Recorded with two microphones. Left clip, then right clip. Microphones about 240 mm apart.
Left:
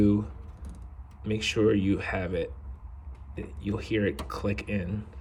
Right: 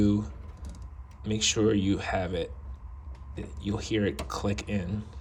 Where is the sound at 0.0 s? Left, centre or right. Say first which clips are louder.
Left 2 dB; centre.